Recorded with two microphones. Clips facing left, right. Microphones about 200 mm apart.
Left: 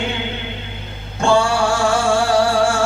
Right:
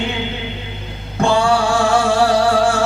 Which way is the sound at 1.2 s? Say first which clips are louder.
Right 1 dB; 60° right (ahead or behind).